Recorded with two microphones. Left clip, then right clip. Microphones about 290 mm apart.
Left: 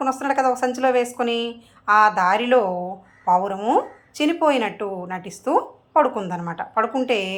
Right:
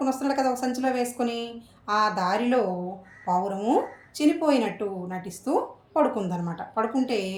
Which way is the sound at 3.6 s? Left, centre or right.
Centre.